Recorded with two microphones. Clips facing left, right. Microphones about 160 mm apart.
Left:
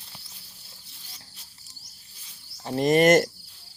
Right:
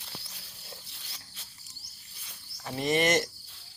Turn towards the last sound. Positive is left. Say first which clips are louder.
# left 8 dB
turn(degrees=50)  # may be behind; listen again after turning